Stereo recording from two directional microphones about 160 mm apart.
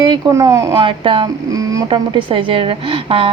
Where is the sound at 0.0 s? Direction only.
25° right (ahead or behind).